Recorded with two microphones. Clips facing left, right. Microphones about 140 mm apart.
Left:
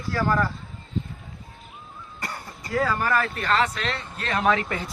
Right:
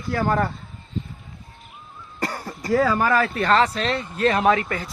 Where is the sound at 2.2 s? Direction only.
35° right (ahead or behind).